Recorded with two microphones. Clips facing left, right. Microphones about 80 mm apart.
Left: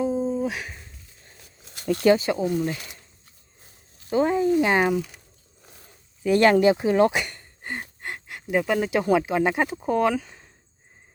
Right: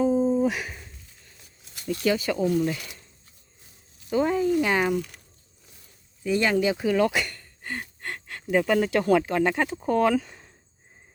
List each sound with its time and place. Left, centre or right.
0.4 s a sound: centre
1.9 s speech: left
2.1 s speech: left
4.1 s speech: left
4.9 s speech: centre
5.6 s a sound: left
6.7 s speech: left; by 10.5 s centre